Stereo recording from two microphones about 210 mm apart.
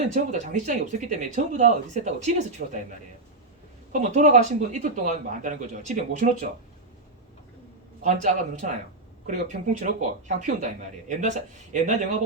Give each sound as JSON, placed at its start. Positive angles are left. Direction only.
{"t": 0.1, "sound": "speech", "side_deg": -35}
{"t": 3.9, "sound": "speech", "side_deg": -35}
{"t": 8.0, "sound": "speech", "side_deg": -35}